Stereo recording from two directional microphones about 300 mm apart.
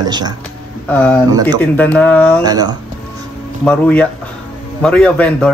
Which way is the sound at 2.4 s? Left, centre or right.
Centre.